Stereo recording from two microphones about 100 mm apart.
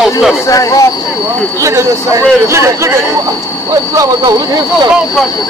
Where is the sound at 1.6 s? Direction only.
30° right (ahead or behind).